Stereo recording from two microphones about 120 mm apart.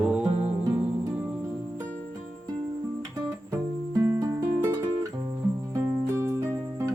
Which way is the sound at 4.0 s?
25° right (ahead or behind).